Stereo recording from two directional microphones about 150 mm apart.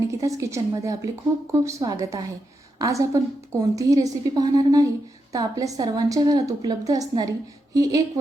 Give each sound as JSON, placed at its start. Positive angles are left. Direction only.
{"t": 0.2, "sound": "a woman's voice", "side_deg": -20}